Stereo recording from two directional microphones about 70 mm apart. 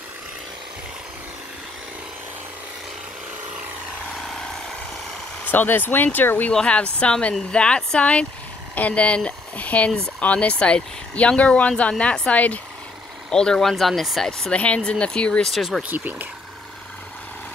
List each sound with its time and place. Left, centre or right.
5.4 s speech: left
6.5 s speech: centre
13.3 s speech: centre
15.5 s speech: centre
15.9 s speech: right